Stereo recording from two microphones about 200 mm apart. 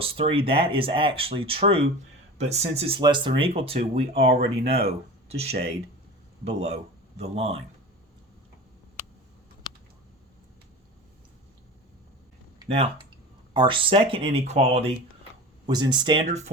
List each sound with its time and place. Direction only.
0.0 s speech: 30° right (ahead or behind)
12.5 s a sound: 30° right (ahead or behind)
13.5 s speech: 25° right (ahead or behind)
15.6 s speech: 20° right (ahead or behind)